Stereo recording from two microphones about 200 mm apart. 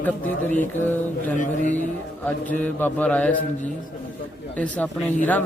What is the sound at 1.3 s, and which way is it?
Speech, 40° left (ahead or behind).